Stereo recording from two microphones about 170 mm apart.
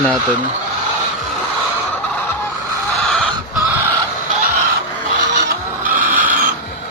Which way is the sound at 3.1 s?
5° left (ahead or behind).